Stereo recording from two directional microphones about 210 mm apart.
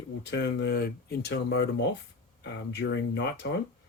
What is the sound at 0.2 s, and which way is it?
Speech, 55° left (ahead or behind).